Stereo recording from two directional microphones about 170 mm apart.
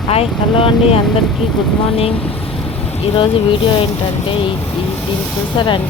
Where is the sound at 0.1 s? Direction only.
35° left (ahead or behind).